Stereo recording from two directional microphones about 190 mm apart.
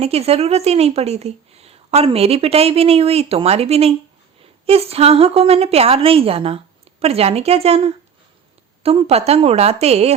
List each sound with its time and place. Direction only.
0.0 s a woman's voice: 30° right (ahead or behind)